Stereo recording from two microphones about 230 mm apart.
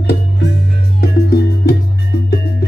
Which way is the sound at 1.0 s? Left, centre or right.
Left.